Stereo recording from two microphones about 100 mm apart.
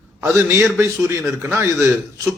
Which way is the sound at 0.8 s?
25° right (ahead or behind).